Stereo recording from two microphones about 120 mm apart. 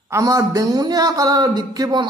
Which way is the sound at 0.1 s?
30° right (ahead or behind).